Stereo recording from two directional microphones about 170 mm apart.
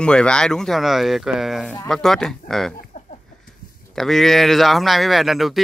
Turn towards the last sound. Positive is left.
turn(degrees=0)  # may be behind; listen again after turning